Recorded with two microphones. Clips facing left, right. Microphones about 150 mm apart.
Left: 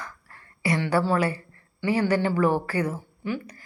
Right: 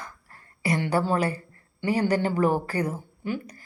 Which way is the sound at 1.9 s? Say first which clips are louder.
Left 1 dB; 40° right (ahead or behind).